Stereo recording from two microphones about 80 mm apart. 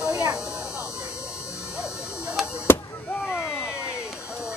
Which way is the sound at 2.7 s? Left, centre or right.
Left.